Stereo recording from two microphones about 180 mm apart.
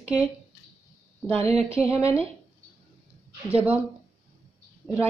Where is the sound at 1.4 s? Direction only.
35° right (ahead or behind).